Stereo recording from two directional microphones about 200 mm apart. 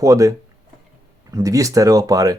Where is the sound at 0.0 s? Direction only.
15° right (ahead or behind).